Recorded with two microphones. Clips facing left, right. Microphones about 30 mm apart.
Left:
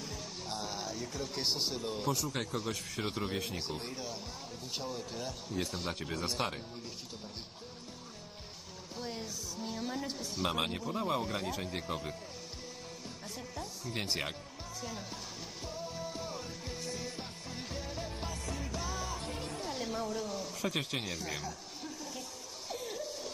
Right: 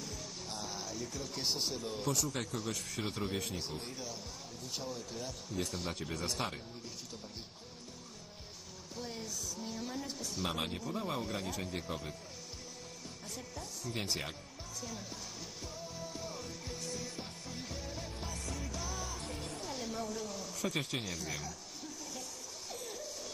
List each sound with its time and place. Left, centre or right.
0.0 s music: left
2.4 s speech: left
9.0 s speech: left
13.6 s speech: centre
15.6 s music: left
22.7 s a sound: left